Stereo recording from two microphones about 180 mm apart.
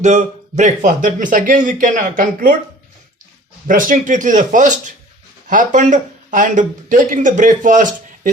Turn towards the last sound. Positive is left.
turn(degrees=-45)  # may be behind; listen again after turning